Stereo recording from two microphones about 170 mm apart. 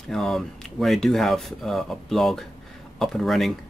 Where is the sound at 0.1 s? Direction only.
Centre (ahead or behind).